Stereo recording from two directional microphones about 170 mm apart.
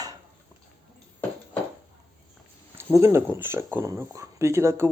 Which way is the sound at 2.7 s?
15° right (ahead or behind).